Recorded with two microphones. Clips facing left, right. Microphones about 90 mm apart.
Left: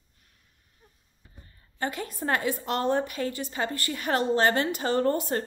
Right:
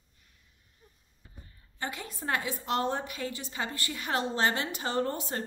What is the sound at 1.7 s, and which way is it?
A woman's voice, 50° left (ahead or behind).